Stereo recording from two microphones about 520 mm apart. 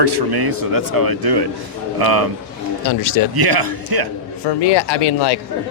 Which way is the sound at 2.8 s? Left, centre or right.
Left.